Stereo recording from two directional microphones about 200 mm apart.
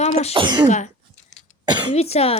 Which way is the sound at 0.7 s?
35° left (ahead or behind).